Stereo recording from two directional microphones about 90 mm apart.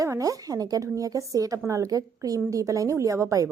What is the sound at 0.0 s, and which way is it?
A woman's voice, 40° right (ahead or behind).